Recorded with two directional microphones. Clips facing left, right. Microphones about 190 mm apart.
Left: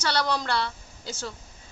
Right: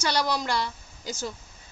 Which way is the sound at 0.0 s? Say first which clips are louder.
Even; 10° right (ahead or behind).